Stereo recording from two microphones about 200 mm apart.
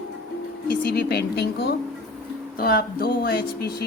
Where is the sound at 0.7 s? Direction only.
50° left (ahead or behind).